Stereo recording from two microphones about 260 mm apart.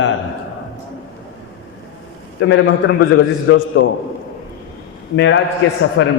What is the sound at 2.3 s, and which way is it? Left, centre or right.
A man's voice, left.